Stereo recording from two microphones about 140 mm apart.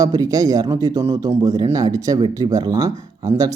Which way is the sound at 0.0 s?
25° right (ahead or behind).